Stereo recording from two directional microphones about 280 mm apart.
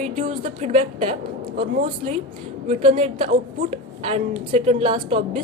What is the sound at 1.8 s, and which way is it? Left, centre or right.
A woman's voice, centre.